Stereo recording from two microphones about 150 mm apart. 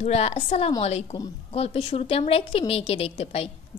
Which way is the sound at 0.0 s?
45° left (ahead or behind).